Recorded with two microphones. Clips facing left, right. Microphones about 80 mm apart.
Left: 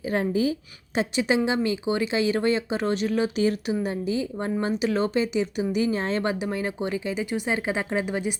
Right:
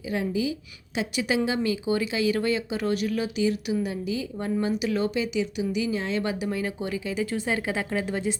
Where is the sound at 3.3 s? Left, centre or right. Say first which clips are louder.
Left 1 dB; left.